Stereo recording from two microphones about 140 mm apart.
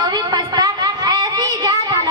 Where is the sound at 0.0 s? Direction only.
30° right (ahead or behind).